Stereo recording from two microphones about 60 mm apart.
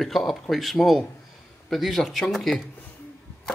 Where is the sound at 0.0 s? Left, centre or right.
Centre.